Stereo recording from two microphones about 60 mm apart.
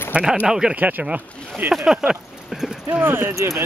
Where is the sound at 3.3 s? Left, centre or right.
Right.